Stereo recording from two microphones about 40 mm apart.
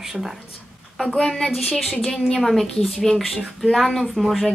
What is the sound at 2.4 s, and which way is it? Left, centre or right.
Speech, centre.